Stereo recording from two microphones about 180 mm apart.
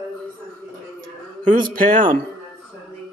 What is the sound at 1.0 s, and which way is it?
Speech, 45° right (ahead or behind).